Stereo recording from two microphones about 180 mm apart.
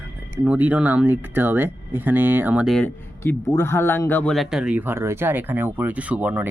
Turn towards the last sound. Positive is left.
turn(degrees=-10)  # may be behind; listen again after turning